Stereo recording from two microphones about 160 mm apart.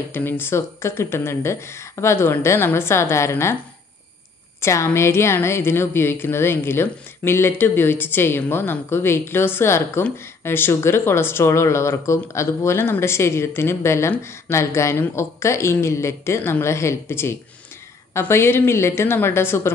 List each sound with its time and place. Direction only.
0.1 s speech: 15° left (ahead or behind)
4.6 s speech: 15° left (ahead or behind)